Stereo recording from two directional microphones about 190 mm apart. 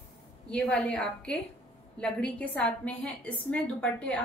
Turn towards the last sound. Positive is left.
turn(degrees=5)  # may be behind; listen again after turning